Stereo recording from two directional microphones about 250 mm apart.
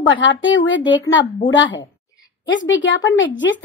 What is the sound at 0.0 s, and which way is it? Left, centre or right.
Speech, left.